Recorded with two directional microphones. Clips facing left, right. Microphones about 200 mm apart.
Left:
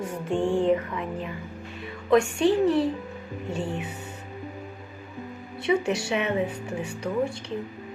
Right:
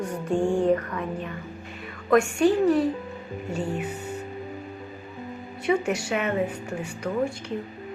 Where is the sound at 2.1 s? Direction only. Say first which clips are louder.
Right 1 dB; 25° left (ahead or behind).